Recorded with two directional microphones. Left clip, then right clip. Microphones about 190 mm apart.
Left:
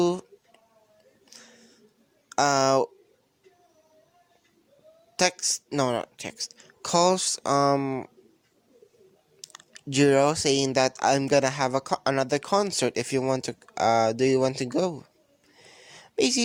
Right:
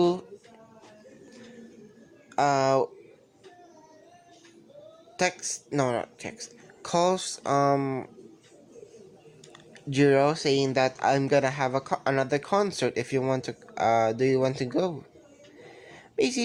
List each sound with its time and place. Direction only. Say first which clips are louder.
0.0 s speech: even; 50° left (ahead or behind)
2.3 s speech: left 1 dB; 55° left (ahead or behind)
5.1 s speech: left 3 dB; 50° left (ahead or behind)
9.5 s speech: left 3 dB; 50° left (ahead or behind)
15.6 s a sound: even; 45° left (ahead or behind)